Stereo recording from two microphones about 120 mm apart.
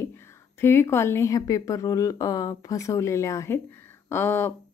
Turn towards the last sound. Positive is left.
turn(degrees=20)  # may be behind; listen again after turning